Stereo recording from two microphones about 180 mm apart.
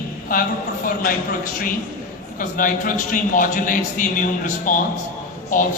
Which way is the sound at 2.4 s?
50° left (ahead or behind).